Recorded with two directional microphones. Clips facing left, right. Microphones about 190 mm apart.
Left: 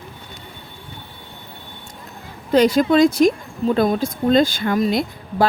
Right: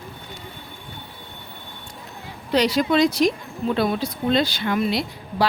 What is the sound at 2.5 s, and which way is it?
Speech, 50° left (ahead or behind).